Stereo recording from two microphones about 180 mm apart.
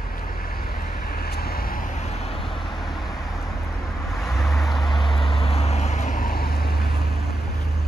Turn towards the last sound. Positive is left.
turn(degrees=60)  # may be behind; listen again after turning